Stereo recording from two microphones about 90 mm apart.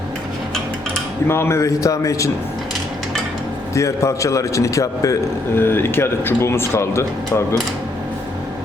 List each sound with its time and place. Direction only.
1.3 s a man's voice: 30° left (ahead or behind)
3.8 s a man's voice: 35° left (ahead or behind)
5.5 s speech: 25° left (ahead or behind)